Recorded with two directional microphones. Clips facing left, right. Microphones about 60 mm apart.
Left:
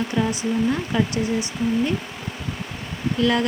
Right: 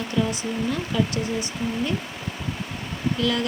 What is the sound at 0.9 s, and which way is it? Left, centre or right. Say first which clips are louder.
Speech: left 1 dB; left.